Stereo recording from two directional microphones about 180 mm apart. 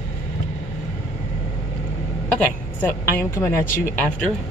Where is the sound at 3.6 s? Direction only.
50° left (ahead or behind).